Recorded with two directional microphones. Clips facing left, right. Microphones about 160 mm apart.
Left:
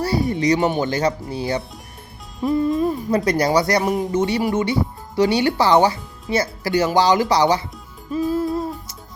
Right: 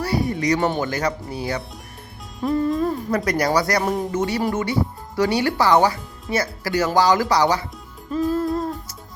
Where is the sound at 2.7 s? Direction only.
20° left (ahead or behind).